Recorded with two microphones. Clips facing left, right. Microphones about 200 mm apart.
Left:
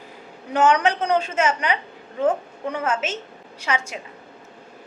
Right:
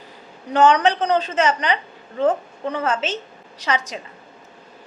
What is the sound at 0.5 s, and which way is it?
A woman's voice, 10° left (ahead or behind).